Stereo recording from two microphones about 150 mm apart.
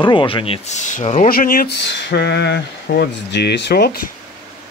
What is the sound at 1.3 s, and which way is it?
Speech, 70° left (ahead or behind).